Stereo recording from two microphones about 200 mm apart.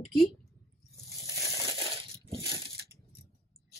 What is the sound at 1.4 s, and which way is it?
Crushing, 15° right (ahead or behind).